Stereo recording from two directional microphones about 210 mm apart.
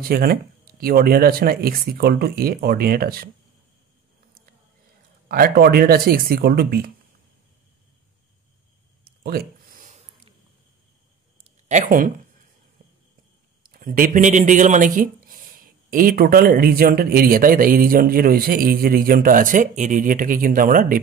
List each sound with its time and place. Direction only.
0.0 s speech: 45° right (ahead or behind)
5.3 s speech: 45° right (ahead or behind)
9.2 s a sound: 45° right (ahead or behind)
11.7 s speech: 40° right (ahead or behind)
13.6 s speech: 40° right (ahead or behind)